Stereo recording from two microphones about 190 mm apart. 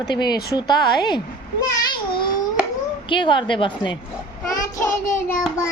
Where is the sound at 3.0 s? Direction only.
25° left (ahead or behind).